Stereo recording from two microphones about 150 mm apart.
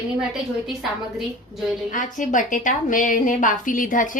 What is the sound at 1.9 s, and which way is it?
A woman's voice, 60° left (ahead or behind).